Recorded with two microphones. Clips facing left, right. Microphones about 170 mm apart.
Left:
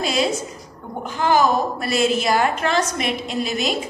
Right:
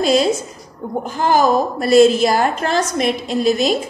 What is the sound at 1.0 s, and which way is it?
A woman's voice, 40° right (ahead or behind).